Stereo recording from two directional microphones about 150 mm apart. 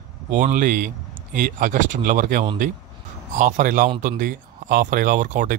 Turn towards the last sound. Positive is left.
turn(degrees=-60)  # may be behind; listen again after turning